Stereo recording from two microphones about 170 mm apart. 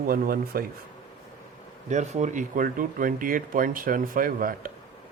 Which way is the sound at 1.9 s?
45° right (ahead or behind).